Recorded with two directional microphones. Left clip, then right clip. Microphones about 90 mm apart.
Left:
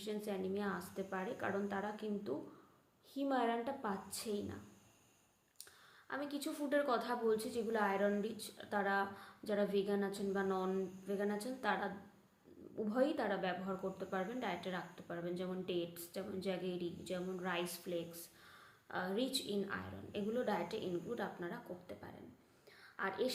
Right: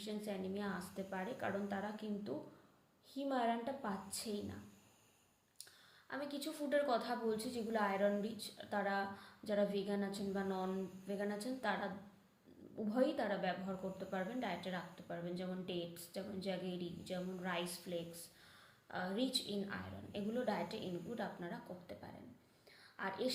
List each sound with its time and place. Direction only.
0.0 s a woman's voice: 35° left (ahead or behind)
6.1 s a woman's voice: 35° left (ahead or behind)